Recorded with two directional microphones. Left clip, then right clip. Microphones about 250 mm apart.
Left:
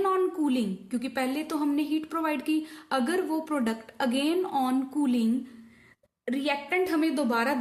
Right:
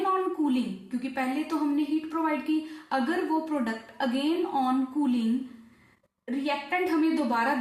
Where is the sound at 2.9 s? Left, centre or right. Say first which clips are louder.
Even; left.